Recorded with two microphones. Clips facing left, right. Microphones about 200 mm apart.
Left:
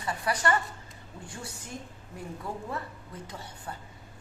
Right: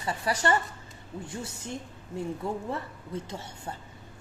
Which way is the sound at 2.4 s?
25° right (ahead or behind).